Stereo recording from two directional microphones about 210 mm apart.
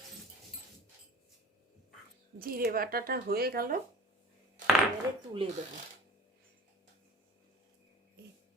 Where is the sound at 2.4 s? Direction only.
45° right (ahead or behind).